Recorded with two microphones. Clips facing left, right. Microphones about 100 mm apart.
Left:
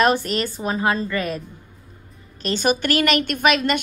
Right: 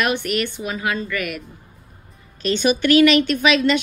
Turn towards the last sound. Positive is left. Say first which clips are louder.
# right 2 dB
turn(degrees=50)  # may be behind; listen again after turning